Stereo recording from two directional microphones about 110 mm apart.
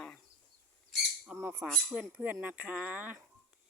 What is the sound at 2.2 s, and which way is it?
Speech, 15° right (ahead or behind).